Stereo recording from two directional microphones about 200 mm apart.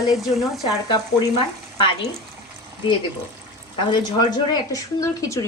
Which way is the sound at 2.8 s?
25° left (ahead or behind).